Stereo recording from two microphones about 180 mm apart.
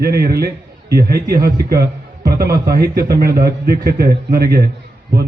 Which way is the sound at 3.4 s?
60° right (ahead or behind).